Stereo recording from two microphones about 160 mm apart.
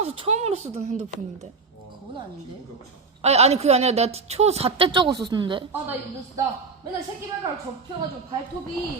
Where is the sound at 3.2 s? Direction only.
40° right (ahead or behind).